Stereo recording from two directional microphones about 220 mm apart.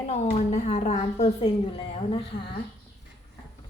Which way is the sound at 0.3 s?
30° left (ahead or behind).